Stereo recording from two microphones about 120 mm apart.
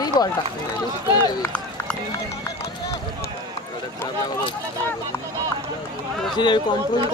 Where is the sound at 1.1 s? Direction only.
35° left (ahead or behind).